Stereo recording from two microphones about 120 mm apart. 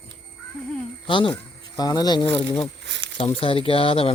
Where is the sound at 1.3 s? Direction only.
30° left (ahead or behind).